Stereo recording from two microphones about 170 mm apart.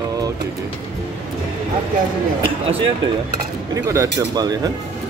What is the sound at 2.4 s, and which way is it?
Speech, 35° right (ahead or behind).